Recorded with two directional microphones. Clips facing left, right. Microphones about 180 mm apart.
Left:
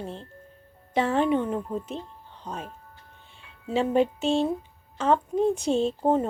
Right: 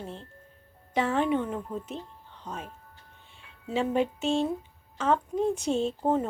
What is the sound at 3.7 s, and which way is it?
A woman's voice, 30° left (ahead or behind).